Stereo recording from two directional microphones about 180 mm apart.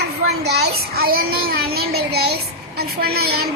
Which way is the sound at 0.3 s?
65° right (ahead or behind).